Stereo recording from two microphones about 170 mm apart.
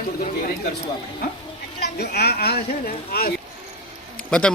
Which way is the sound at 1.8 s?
70° left (ahead or behind).